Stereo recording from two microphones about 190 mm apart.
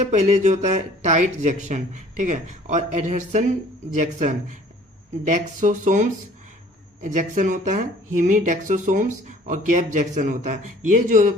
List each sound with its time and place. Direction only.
0.0 s speech: 40° right (ahead or behind)